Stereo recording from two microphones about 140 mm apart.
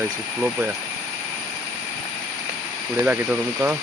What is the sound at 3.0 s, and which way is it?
Speech, 10° right (ahead or behind).